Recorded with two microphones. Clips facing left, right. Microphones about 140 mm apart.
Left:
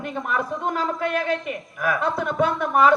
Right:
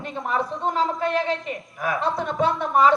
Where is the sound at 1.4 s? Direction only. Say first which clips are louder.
Left 2 dB; 25° right (ahead or behind).